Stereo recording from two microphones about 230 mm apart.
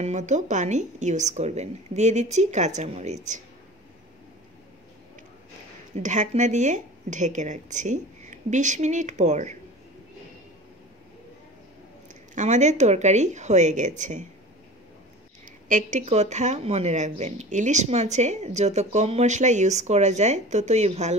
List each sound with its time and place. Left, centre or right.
0.0 s speech: right
5.9 s speech: right
12.4 s speech: right
15.4 s speech: right